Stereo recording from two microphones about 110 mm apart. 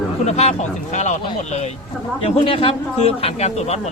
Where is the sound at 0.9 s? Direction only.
90° left.